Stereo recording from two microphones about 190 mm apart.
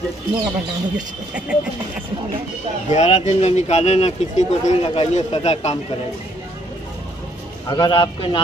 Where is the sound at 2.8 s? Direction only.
35° left (ahead or behind).